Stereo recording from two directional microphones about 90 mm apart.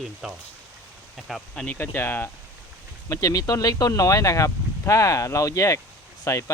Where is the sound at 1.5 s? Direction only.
15° left (ahead or behind).